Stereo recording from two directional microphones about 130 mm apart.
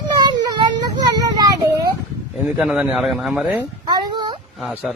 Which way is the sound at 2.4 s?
5° right (ahead or behind).